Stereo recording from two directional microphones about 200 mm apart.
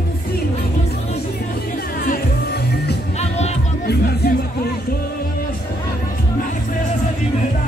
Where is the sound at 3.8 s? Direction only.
50° left (ahead or behind).